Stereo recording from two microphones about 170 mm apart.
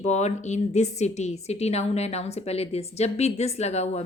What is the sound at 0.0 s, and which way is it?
A woman's voice, 40° left (ahead or behind).